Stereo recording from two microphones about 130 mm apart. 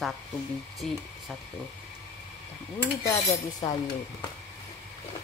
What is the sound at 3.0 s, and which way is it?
Dishes, 30° left (ahead or behind).